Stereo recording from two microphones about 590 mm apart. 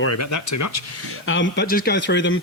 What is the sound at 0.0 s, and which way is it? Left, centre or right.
Speech, left.